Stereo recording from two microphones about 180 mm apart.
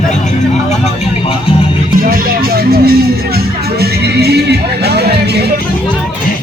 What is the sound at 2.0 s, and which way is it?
Speech, 55° right (ahead or behind).